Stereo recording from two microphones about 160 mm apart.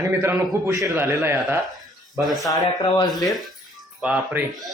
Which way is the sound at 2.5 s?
25° left (ahead or behind).